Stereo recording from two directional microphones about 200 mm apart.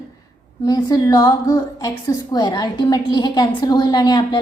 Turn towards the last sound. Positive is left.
turn(degrees=20)  # may be behind; listen again after turning